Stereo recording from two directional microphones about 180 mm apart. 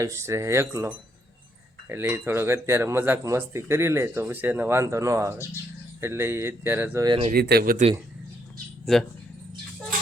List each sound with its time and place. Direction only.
0.0 s speech: 15° right (ahead or behind)
7.3 s speech: 60° right (ahead or behind)
8.9 s speech: centre (ahead or behind)